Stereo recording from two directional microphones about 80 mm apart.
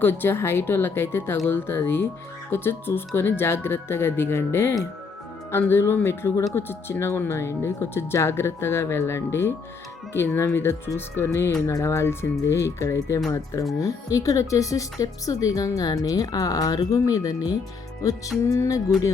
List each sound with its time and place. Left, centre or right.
0.0 s speech: left